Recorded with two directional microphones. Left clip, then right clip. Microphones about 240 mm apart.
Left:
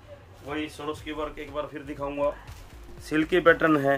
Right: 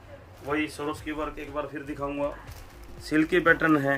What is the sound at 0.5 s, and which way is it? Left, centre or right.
Speech, centre.